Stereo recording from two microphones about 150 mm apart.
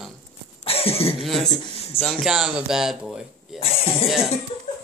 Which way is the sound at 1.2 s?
Centre (ahead or behind).